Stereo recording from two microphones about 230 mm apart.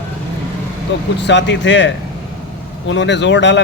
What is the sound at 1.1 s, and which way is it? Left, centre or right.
Speech, left.